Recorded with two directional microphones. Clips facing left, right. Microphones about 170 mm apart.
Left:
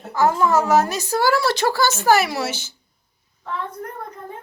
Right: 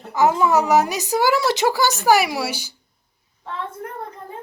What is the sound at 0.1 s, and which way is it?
A woman's voice, 15° right (ahead or behind).